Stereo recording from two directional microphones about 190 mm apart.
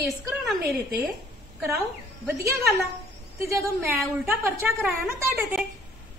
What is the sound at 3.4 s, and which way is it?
A woman's voice, 15° right (ahead or behind).